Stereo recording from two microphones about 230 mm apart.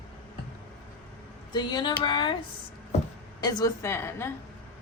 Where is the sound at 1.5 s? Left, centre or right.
Centre.